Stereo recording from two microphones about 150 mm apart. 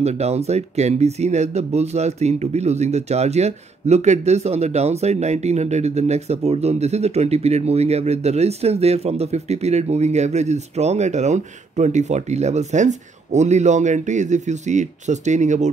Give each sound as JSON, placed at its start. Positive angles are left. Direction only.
{"t": 0.0, "sound": "speech", "side_deg": -45}